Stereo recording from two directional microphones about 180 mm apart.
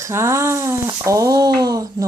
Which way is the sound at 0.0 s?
15° right (ahead or behind).